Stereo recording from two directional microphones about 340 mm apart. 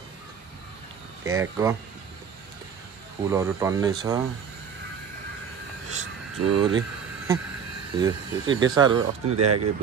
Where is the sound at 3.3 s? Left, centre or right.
Centre.